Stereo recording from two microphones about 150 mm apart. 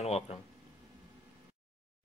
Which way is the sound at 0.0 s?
45° left (ahead or behind).